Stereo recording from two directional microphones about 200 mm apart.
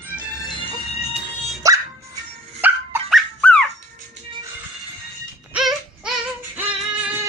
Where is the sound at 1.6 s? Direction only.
15° right (ahead or behind).